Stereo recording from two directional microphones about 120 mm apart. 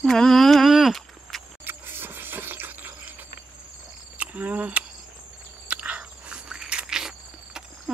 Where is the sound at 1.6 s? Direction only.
20° right (ahead or behind).